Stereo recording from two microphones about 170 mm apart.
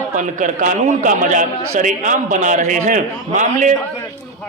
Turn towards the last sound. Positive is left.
turn(degrees=-45)  # may be behind; listen again after turning